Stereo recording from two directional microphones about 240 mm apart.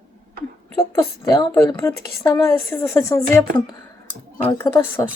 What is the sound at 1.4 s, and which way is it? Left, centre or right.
Speech, centre.